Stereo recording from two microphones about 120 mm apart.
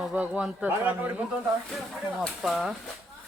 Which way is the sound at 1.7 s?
Centre (ahead or behind).